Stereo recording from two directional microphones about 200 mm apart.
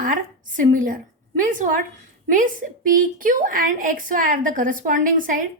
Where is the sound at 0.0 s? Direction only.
40° right (ahead or behind).